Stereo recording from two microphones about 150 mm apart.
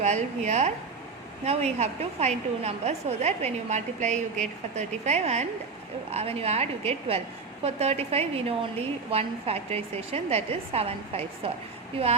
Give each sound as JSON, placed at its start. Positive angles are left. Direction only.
{"t": 0.0, "sound": "a woman's voice", "side_deg": -50}